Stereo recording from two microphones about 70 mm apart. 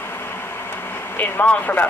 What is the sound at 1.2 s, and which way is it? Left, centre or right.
Speech, left.